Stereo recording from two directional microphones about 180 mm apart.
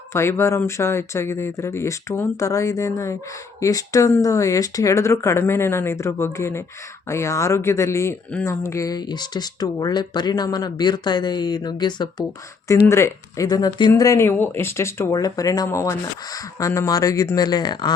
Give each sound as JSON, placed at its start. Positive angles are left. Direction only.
{"t": 0.1, "sound": "speech", "side_deg": 15}